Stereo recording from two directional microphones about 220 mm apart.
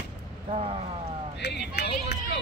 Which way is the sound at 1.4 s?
50° left (ahead or behind).